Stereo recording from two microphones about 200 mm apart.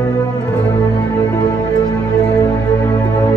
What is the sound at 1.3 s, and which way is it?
Music, 20° left (ahead or behind).